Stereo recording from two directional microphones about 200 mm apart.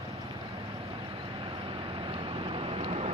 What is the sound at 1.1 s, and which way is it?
Vehicle, 25° right (ahead or behind).